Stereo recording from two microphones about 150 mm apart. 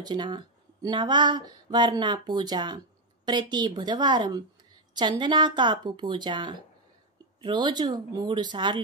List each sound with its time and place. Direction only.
0.0 s a woman's voice: 30° right (ahead or behind)